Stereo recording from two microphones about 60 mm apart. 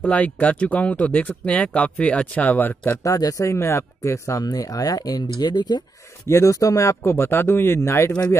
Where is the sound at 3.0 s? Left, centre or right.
Left.